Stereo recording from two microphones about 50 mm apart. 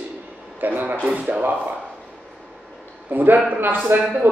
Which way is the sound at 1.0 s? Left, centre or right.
Right.